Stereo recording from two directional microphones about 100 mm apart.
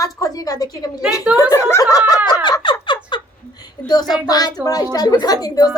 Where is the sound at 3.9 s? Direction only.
45° left (ahead or behind).